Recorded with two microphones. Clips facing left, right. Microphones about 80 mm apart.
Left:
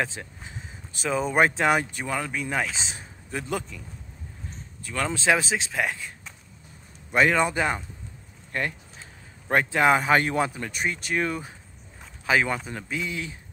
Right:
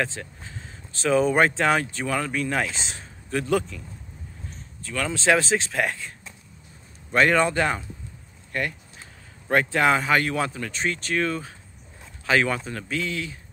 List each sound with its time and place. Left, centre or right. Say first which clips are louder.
0.0 s a sound: right 1 dB; centre
1.0 s speech: right 3 dB; centre
4.9 s speech: even; left
5.2 s speech: right 4 dB; centre
7.1 s speech: right 2 dB; centre
8.5 s speech: right 1 dB; left